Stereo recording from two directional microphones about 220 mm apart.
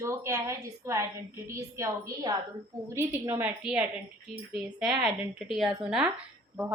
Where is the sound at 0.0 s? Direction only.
15° right (ahead or behind).